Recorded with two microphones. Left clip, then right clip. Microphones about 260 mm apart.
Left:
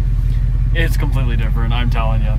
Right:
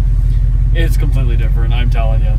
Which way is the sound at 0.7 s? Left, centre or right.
Centre.